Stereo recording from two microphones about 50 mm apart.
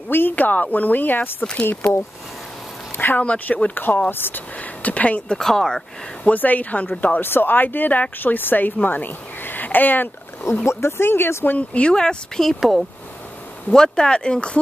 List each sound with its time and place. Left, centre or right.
0.1 s speech: left
1.4 s speech: left
3.2 s speech: left
5.3 s speech: centre
6.2 s speech: left
7.2 s speech: left
10.5 s speech: left
11.5 s speech: left
11.9 s speech: centre
12.5 s speech: centre
13.7 s speech: centre